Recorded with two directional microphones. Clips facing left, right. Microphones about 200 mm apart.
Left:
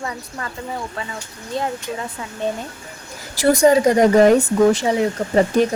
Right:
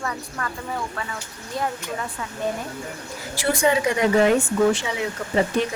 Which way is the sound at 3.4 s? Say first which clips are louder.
Left 7 dB; 40° left (ahead or behind).